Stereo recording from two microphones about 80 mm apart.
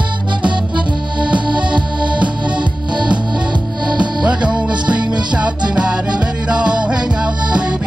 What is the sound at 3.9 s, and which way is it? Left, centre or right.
Music, centre.